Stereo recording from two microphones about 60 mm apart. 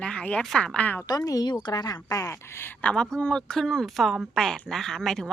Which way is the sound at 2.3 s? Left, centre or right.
Left.